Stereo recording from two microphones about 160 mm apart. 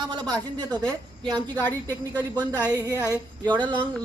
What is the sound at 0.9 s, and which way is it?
Speech, 25° right (ahead or behind).